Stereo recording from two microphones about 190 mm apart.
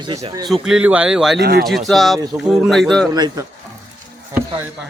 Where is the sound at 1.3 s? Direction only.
55° right (ahead or behind).